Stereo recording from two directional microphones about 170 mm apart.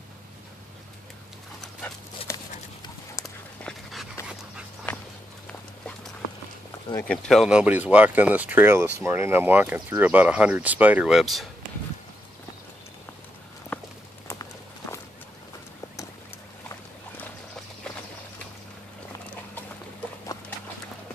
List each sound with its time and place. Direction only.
2.3 s horse: 15° left (ahead or behind)
3.6 s dog: centre (ahead or behind)
5.5 s clip-clop: 5° left (ahead or behind)
7.1 s speech: centre (ahead or behind)
13.7 s walk: 5° left (ahead or behind)
14.2 s clip-clop: 20° left (ahead or behind)